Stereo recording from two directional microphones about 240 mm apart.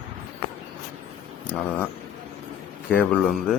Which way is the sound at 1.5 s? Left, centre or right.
Centre.